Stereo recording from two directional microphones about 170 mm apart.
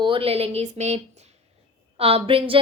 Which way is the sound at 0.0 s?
30° right (ahead or behind).